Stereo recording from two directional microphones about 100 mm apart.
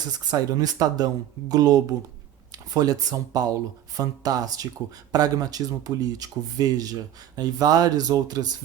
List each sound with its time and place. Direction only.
0.0 s speech: 40° right (ahead or behind)